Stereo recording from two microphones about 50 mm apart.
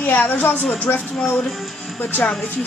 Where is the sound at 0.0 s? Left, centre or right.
Left.